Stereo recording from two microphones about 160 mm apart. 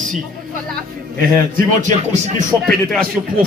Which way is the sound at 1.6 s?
45° right (ahead or behind).